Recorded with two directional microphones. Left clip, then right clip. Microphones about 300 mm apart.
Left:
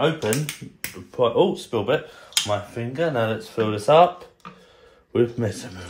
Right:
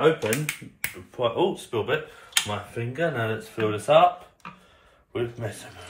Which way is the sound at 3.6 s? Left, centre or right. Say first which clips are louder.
Left 3 dB; left.